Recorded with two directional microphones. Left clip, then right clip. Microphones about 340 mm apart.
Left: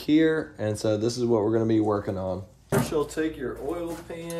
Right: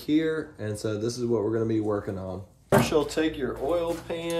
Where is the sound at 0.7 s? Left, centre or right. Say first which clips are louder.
Left 4 dB; centre.